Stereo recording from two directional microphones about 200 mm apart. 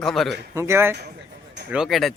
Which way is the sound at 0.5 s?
15° right (ahead or behind).